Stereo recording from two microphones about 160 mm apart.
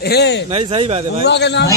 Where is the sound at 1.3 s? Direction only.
90° left.